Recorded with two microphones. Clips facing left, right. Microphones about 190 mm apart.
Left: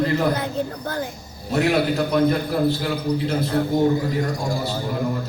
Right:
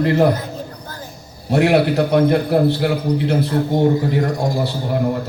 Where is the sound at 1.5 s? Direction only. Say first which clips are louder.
Right 5 dB; 65° right (ahead or behind).